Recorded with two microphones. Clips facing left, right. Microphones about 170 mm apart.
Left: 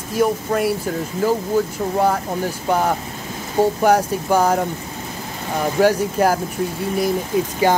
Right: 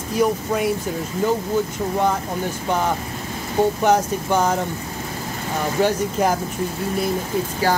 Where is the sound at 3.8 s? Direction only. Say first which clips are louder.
Left 2 dB; 10° left (ahead or behind).